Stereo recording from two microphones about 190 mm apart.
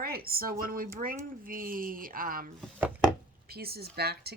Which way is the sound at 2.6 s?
10° right (ahead or behind).